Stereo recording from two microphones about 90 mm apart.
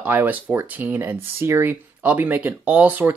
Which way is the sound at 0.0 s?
20° right (ahead or behind).